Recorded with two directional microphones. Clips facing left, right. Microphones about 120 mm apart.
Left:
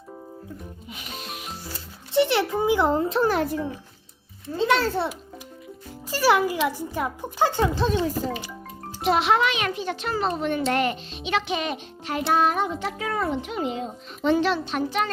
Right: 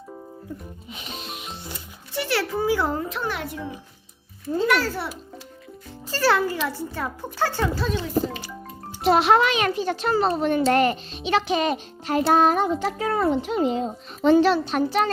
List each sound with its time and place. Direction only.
0.9 s music: 25° right (ahead or behind)
2.1 s a child's voice: 20° left (ahead or behind); by 3.6 s 40° left (ahead or behind)
4.5 s a child's voice: 25° left (ahead or behind)
6.1 s a child's voice: 15° left (ahead or behind)
7.9 s a child's voice: 30° left (ahead or behind)
9.0 s a child's voice: 40° right (ahead or behind)